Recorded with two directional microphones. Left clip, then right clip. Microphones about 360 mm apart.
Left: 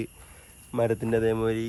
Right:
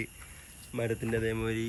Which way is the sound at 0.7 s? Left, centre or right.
Left.